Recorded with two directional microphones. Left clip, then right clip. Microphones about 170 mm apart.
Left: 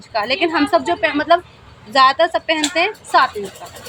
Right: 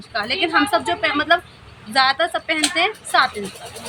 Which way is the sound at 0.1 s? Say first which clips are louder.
Left 2 dB; 35° left (ahead or behind).